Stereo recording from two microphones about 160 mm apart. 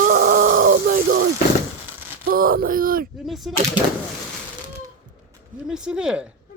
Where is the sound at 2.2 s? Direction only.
65° right (ahead or behind).